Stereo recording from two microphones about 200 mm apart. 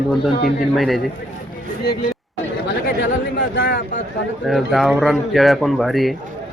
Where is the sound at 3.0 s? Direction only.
65° left (ahead or behind).